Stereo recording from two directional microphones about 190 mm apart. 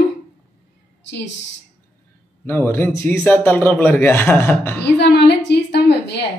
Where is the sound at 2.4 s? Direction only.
10° left (ahead or behind).